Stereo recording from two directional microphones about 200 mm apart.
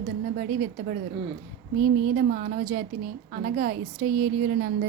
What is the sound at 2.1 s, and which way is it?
A woman's voice, 45° right (ahead or behind).